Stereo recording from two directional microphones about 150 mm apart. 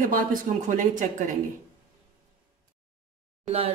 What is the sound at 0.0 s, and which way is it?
Speech, 65° right (ahead or behind).